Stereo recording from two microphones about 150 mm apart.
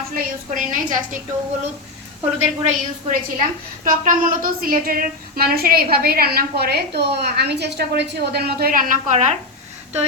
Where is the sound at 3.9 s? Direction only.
65° right (ahead or behind).